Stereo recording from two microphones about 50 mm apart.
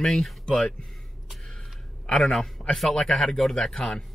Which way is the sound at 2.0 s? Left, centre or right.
Centre.